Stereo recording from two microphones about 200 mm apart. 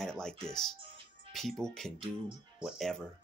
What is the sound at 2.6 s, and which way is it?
Speech, centre (ahead or behind).